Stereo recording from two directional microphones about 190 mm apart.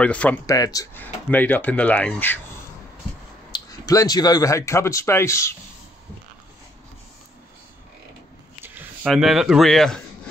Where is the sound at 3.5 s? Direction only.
20° left (ahead or behind).